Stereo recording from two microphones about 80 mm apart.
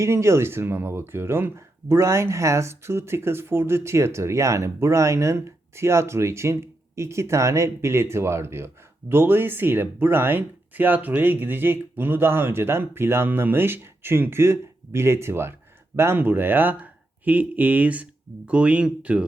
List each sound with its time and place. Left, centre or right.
0.0 s speech: right; by 19.2 s centre